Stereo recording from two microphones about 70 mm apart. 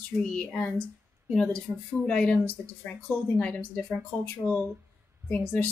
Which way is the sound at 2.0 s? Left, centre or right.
Centre.